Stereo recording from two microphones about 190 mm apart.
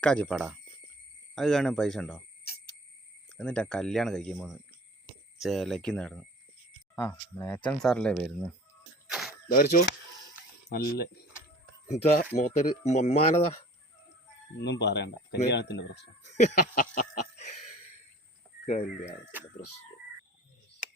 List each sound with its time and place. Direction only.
0.0 s speech: 5° left (ahead or behind)
3.3 s speech: 5° left (ahead or behind)
9.0 s a sound: 5° right (ahead or behind)
9.5 s speech: 45° left (ahead or behind)
12.4 s speech: 40° left (ahead or behind)
14.6 s speech: 65° left (ahead or behind)
16.4 s speech: 40° left (ahead or behind)
18.6 s speech: 35° left (ahead or behind)
19.2 s speech: 10° right (ahead or behind)